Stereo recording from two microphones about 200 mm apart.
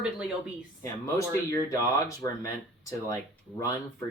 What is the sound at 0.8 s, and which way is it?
Speech, 15° left (ahead or behind).